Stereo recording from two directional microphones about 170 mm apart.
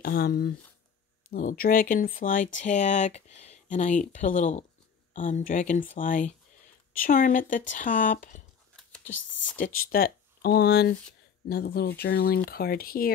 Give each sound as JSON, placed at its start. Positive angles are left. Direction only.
{"t": 0.0, "sound": "speech", "side_deg": 65}
{"t": 8.7, "sound": "typing", "side_deg": 5}
{"t": 9.6, "sound": "speech", "side_deg": 55}